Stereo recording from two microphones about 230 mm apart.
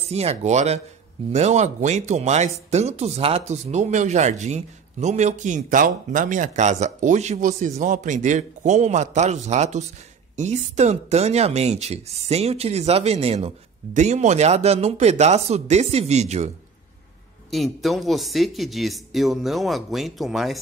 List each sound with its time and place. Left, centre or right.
0.0 s speech: right
17.5 s speech: centre